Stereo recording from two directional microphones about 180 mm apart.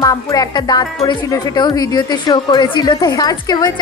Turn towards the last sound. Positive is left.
turn(degrees=20)  # may be behind; listen again after turning